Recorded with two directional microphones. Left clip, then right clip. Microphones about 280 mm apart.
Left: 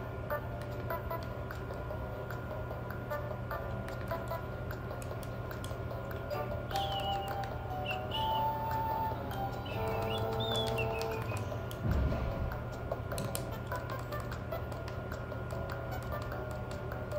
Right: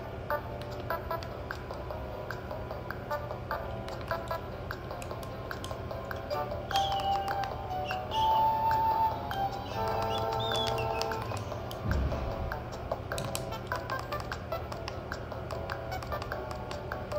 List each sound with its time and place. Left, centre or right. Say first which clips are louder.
6.3 s music: right 6 dB; centre
13.7 s music: right 7 dB; centre